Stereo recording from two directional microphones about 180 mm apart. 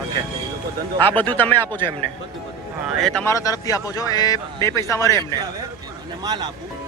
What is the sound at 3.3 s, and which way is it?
Speech, 20° left (ahead or behind).